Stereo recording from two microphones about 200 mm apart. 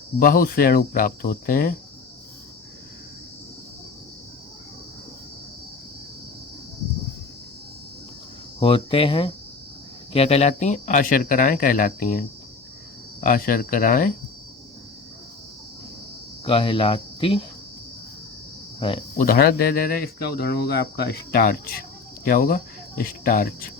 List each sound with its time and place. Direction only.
0.2 s speech: 45° left (ahead or behind)
8.5 s speech: 25° left (ahead or behind); by 12.2 s 45° left (ahead or behind)
13.2 s speech: 45° left (ahead or behind)
16.5 s speech: 25° left (ahead or behind)
18.8 s speech: 25° left (ahead or behind)
19.1 s speech: 45° left (ahead or behind)